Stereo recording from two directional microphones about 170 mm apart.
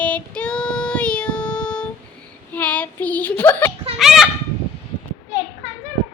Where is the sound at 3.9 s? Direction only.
Centre (ahead or behind).